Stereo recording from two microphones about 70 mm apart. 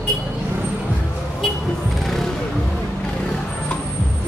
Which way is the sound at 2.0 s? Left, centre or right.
Centre.